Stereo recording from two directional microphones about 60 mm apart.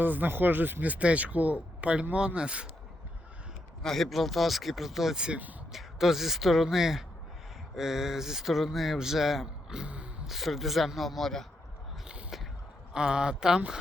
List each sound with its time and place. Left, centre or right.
0.0 s speech: right
3.8 s speech: centre
10.2 s speech: centre
12.3 s a sound: centre
12.9 s speech: centre